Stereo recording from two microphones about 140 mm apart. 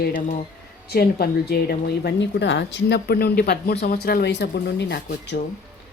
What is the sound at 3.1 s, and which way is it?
Speech, 90° left.